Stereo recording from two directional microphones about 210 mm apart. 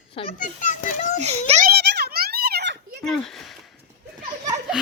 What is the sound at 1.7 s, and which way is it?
Children playing, 50° right (ahead or behind).